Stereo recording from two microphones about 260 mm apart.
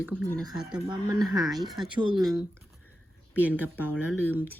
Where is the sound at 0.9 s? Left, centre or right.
Centre.